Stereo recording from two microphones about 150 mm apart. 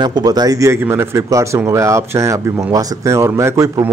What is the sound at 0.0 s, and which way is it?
Speech, 25° right (ahead or behind).